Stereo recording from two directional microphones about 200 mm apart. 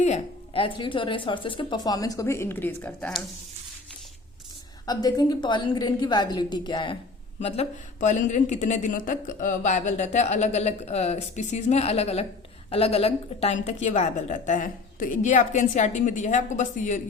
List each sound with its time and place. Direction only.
0.0 s speech: 30° left (ahead or behind); by 3.2 s 5° left (ahead or behind)
4.9 s speech: 20° left (ahead or behind); by 17.0 s 40° left (ahead or behind)